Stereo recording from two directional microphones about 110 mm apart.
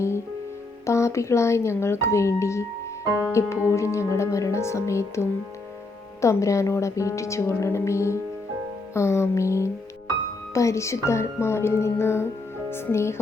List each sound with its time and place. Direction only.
0.9 s a woman's voice: 25° left (ahead or behind)